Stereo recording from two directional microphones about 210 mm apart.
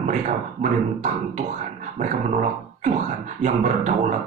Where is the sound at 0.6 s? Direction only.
35° right (ahead or behind).